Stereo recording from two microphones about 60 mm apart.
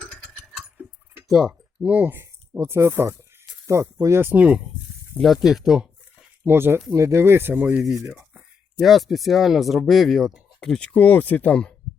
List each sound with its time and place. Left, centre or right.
0.0 s vehicle: centre
1.3 s speech: centre
1.8 s speech: right
2.1 s speech: right
3.7 s speech: right
4.4 s speech: centre
5.2 s speech: centre
6.4 s speech: right
6.9 s speech: right
7.5 s speech: right
8.1 s a sound: centre
8.8 s speech: centre
10.6 s speech: centre